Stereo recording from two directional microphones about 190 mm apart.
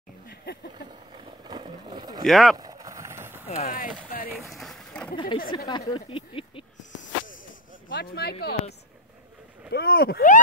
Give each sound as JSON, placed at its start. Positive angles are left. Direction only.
{"t": 0.3, "sound": "a sound", "side_deg": 55}
{"t": 0.8, "sound": "a sound", "side_deg": -25}
{"t": 2.2, "sound": "speech", "side_deg": 0}
{"t": 2.5, "sound": "vehicle", "side_deg": -20}
{"t": 3.4, "sound": "speech", "side_deg": 35}
{"t": 4.3, "sound": "run", "side_deg": 0}
{"t": 5.1, "sound": "speech", "side_deg": 25}
{"t": 7.9, "sound": "speech", "side_deg": 55}
{"t": 9.7, "sound": "speech", "side_deg": 55}